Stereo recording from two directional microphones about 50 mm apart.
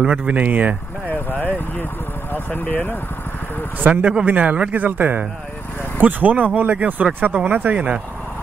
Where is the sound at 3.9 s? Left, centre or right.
Right.